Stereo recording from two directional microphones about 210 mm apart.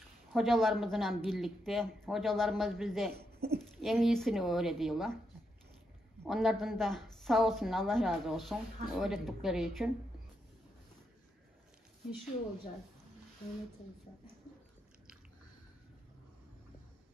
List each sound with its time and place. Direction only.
0.3 s a woman's voice: centre (ahead or behind)
3.2 s speech: 50° right (ahead or behind)
3.8 s a woman's voice: centre (ahead or behind)
6.2 s a woman's voice: centre (ahead or behind)